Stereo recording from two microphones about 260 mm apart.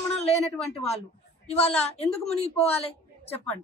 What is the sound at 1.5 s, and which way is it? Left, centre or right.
A woman's voice, left.